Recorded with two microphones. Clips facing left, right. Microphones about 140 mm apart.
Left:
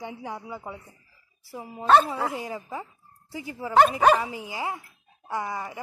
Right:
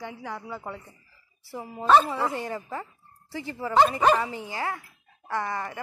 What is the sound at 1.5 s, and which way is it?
Speech, centre (ahead or behind).